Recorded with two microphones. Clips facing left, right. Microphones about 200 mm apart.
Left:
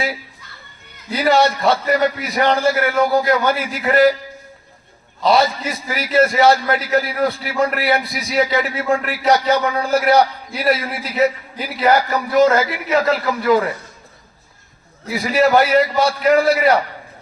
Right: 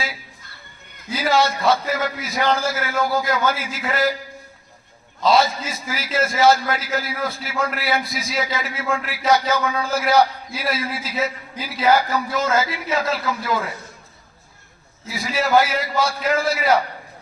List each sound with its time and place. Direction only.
1.1 s a man's voice: 60° left (ahead or behind)
5.2 s a man's voice: 60° left (ahead or behind)
15.0 s a man's voice: 65° left (ahead or behind)